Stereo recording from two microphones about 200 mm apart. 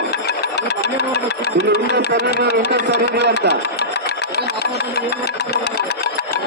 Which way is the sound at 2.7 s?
55° right (ahead or behind).